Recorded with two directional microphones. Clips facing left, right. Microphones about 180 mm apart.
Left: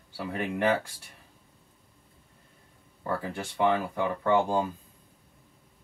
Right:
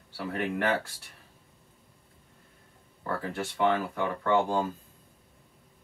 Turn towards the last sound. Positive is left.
turn(degrees=15)  # may be behind; listen again after turning